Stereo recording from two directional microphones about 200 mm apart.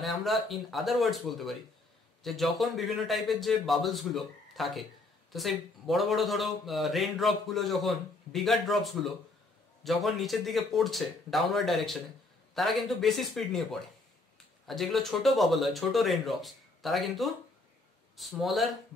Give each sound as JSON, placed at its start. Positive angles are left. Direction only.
{"t": 0.0, "sound": "a man's voice", "side_deg": 0}